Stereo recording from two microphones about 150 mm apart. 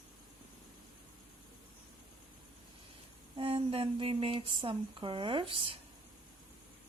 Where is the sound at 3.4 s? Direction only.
35° right (ahead or behind).